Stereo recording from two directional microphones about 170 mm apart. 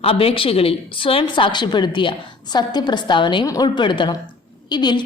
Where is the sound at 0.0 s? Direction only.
35° left (ahead or behind).